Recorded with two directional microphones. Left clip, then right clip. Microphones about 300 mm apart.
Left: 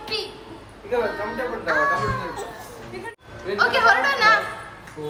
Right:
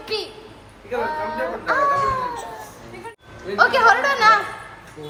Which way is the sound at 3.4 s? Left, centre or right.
Centre.